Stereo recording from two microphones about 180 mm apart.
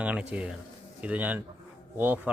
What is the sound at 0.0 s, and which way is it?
Speech, 5° right (ahead or behind).